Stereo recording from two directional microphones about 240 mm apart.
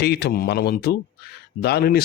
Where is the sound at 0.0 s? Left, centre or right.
Left.